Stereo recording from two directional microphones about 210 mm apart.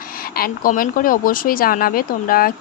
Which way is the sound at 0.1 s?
45° left (ahead or behind).